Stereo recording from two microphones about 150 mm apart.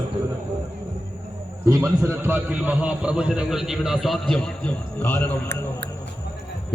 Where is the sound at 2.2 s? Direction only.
10° right (ahead or behind); by 5.2 s 10° left (ahead or behind).